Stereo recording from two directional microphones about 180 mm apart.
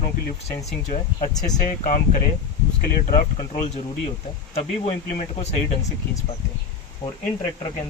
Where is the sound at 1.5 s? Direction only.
45° left (ahead or behind).